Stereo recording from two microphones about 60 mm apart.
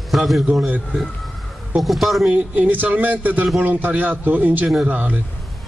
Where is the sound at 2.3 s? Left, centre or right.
Right.